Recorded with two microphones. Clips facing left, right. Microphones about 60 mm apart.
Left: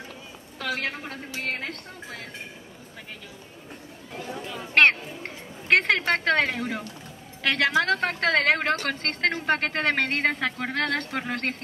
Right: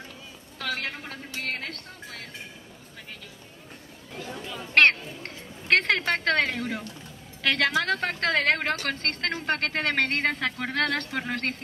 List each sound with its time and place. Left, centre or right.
0.7 s speech: centre
4.1 s speech: centre